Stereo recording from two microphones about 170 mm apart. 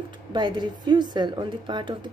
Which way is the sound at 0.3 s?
25° right (ahead or behind).